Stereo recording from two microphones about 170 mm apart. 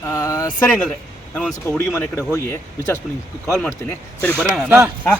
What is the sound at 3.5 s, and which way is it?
Speech, 5° left (ahead or behind).